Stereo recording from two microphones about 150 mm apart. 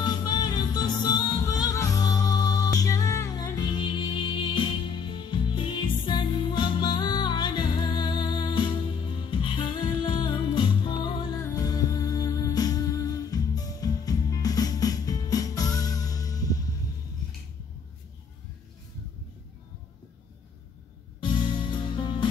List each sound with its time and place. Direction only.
0.0 s music: 30° left (ahead or behind)
21.2 s music: 30° left (ahead or behind)